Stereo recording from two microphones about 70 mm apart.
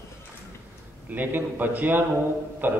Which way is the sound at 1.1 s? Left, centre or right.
Right.